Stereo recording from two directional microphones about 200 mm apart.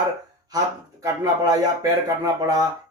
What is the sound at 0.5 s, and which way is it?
Speech, 20° right (ahead or behind).